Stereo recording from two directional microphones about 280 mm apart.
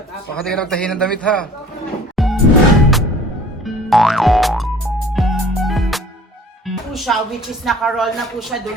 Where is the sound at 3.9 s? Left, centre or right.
Centre.